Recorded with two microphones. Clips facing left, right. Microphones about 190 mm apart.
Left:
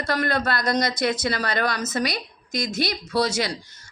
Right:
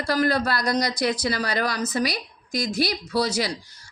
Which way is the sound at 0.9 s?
25° left (ahead or behind).